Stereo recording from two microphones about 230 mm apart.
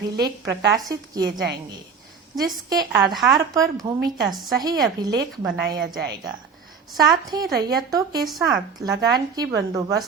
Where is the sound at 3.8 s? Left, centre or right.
Right.